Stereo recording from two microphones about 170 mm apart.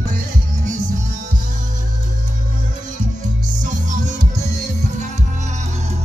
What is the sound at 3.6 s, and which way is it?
Music, 50° right (ahead or behind).